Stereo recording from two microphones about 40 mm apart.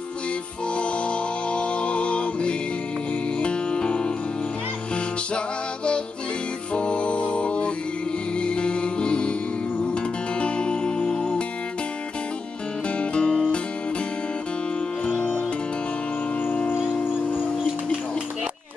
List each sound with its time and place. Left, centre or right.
0.7 s music: left
6.7 s music: left
10.4 s music: left
13.0 s music: left